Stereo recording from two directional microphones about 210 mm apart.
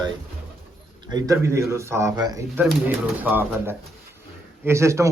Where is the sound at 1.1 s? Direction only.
15° right (ahead or behind).